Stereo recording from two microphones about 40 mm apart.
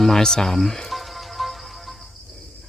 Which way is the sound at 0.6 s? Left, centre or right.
Centre.